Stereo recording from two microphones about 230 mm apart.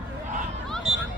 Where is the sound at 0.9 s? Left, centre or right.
Right.